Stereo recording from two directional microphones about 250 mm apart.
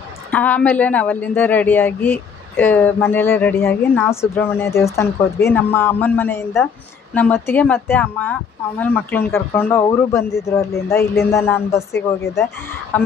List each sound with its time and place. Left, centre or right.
0.3 s a woman's voice: centre